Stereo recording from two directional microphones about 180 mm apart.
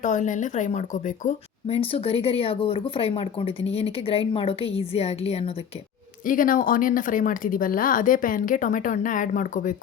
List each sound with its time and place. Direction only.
0.0 s speech: 45° left (ahead or behind)
6.2 s speech: 50° left (ahead or behind)